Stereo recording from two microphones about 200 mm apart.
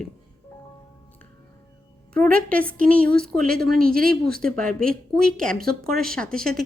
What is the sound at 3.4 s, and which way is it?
Speech, 50° right (ahead or behind).